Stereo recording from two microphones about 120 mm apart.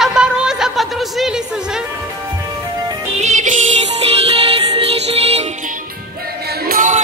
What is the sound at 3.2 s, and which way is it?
Music, 75° right (ahead or behind).